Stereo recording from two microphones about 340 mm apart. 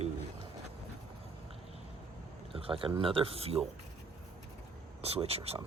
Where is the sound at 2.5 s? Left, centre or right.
Centre.